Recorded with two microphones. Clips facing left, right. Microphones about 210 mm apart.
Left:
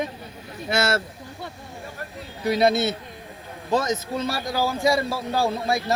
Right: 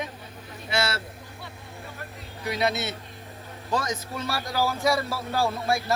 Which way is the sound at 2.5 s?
35° left (ahead or behind).